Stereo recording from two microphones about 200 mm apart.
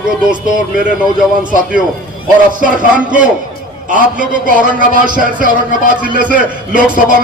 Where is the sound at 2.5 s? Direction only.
40° right (ahead or behind).